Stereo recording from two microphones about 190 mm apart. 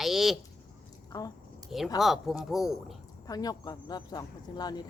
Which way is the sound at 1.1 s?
20° left (ahead or behind).